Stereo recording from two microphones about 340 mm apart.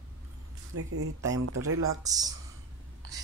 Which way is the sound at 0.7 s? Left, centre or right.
Right.